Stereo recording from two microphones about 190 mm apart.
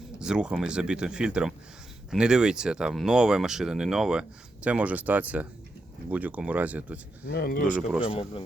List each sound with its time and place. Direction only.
0.2 s speech: 5° right (ahead or behind)
7.3 s speech: 55° left (ahead or behind)
7.7 s speech: 5° right (ahead or behind)
8.1 s speech: 25° left (ahead or behind)